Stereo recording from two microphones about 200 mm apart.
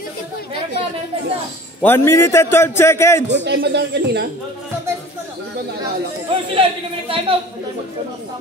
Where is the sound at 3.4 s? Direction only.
55° right (ahead or behind).